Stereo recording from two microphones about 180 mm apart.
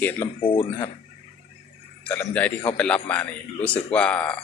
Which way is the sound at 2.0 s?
10° left (ahead or behind).